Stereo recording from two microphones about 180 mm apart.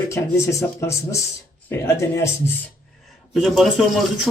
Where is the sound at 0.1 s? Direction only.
15° left (ahead or behind).